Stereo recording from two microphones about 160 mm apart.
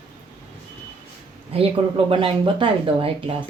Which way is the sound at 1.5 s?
40° right (ahead or behind).